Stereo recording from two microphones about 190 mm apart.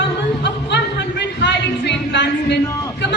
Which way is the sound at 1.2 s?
65° left (ahead or behind).